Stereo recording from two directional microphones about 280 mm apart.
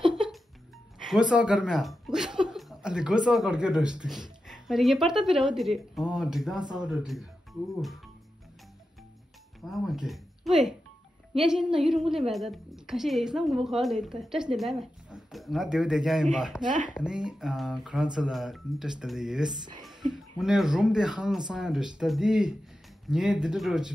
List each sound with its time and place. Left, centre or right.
0.0 s music: centre
0.9 s a woman's voice: centre
9.7 s a woman's voice: centre
16.6 s speech: right
16.9 s a woman's voice: centre